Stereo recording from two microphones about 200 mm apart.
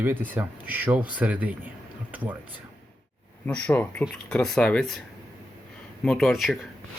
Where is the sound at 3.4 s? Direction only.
10° left (ahead or behind).